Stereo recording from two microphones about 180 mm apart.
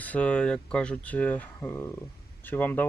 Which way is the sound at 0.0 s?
5° left (ahead or behind).